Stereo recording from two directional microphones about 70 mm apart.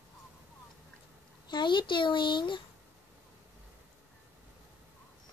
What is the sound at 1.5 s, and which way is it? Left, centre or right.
Speech, left.